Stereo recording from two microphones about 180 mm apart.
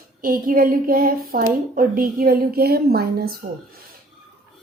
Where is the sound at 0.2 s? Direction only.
50° right (ahead or behind).